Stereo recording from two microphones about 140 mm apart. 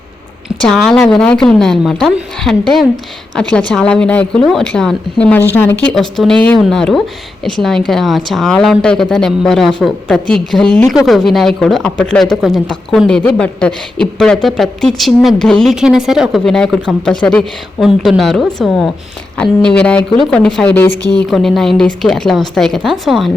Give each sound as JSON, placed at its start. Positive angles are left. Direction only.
{"t": 0.6, "sound": "speech", "side_deg": 5}
{"t": 5.8, "sound": "speech", "side_deg": 5}
{"t": 20.7, "sound": "speech", "side_deg": 15}
{"t": 21.1, "sound": "speech", "side_deg": 5}